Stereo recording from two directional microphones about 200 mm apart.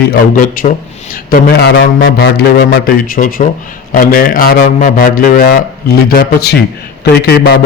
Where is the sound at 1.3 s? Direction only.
55° left (ahead or behind).